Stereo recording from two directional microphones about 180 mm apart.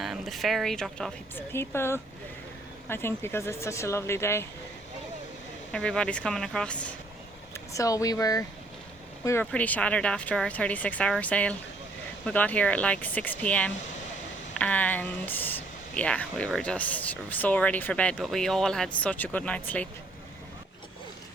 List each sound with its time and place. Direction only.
0.0 s speech: centre (ahead or behind)
5.7 s speech: 5° left (ahead or behind)
7.5 s speech: 20° left (ahead or behind)